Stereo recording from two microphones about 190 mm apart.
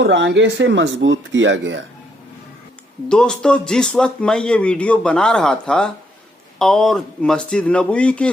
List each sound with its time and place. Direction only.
0.0 s speech: 70° right (ahead or behind)
3.1 s speech: 5° left (ahead or behind)